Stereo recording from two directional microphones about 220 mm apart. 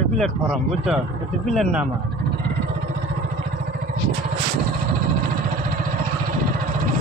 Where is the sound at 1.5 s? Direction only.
Centre (ahead or behind).